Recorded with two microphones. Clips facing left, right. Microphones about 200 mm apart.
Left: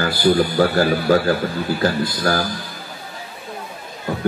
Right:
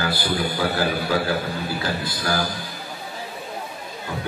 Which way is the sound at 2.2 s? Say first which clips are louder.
Left 4 dB; 50° left (ahead or behind).